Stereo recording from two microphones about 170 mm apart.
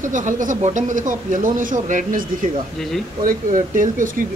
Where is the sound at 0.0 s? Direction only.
50° right (ahead or behind).